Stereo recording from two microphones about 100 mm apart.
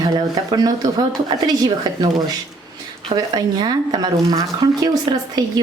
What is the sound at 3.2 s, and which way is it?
Speech, 45° right (ahead or behind).